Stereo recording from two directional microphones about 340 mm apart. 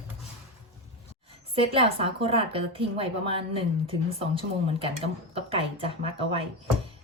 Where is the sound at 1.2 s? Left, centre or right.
Centre.